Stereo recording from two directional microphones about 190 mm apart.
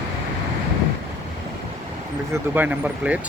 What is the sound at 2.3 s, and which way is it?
Speech, 10° right (ahead or behind).